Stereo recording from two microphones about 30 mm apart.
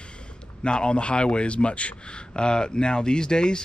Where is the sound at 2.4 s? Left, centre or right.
Left.